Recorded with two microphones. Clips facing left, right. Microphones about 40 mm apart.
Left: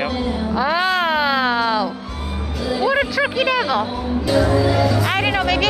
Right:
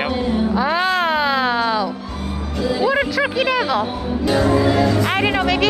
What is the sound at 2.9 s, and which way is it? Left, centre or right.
Speech, centre.